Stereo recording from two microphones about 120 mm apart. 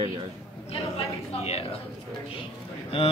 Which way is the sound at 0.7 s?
60° left (ahead or behind).